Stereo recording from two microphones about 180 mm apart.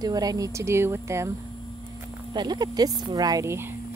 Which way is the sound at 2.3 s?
25° right (ahead or behind).